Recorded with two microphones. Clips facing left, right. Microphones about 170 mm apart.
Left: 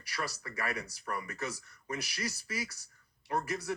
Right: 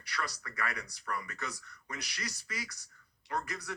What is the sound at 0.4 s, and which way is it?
Speech, 25° left (ahead or behind).